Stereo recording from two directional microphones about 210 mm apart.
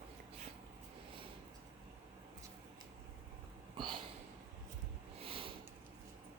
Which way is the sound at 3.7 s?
20° right (ahead or behind).